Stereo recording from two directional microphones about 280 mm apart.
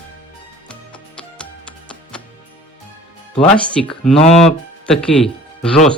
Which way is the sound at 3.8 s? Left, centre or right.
Centre.